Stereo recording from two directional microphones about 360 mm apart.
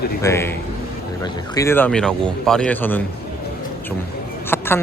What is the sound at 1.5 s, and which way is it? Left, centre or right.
Speech, centre.